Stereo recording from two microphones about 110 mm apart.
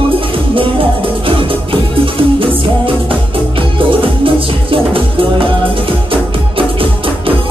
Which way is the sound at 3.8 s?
50° right (ahead or behind).